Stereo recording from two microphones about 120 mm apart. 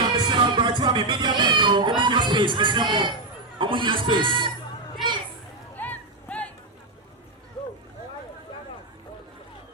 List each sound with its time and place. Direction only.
0.0 s music: 40° right (ahead or behind)
3.6 s speech: 45° right (ahead or behind)
5.7 s a sound: 15° left (ahead or behind)